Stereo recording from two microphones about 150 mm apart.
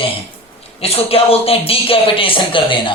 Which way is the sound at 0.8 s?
40° left (ahead or behind).